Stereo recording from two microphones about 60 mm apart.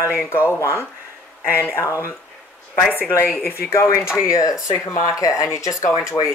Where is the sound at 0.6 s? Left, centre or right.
Left.